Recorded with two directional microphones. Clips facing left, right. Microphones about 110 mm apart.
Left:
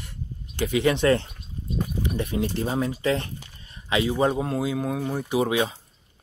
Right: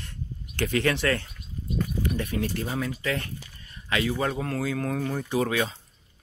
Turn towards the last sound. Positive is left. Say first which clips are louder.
# left 3 dB
turn(degrees=20)  # may be behind; listen again after turning